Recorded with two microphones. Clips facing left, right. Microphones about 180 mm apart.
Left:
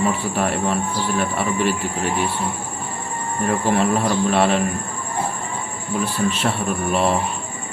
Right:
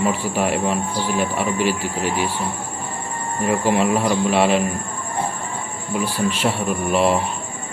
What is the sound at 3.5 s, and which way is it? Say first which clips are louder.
Speech: right 1 dB; 10° right (ahead or behind).